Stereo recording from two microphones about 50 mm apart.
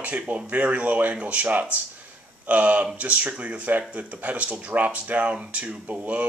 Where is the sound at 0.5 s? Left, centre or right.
Right.